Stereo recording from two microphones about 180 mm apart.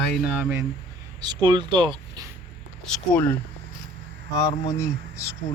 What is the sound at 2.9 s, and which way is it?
Speech, 10° left (ahead or behind).